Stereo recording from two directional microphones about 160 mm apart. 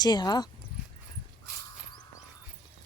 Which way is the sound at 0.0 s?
25° left (ahead or behind).